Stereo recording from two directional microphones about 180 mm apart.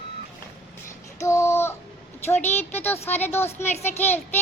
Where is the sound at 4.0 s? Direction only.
10° left (ahead or behind).